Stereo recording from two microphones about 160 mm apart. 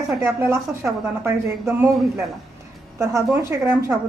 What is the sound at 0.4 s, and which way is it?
Speech, 15° right (ahead or behind).